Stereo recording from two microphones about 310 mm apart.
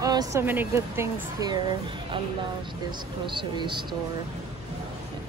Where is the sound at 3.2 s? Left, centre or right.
Centre.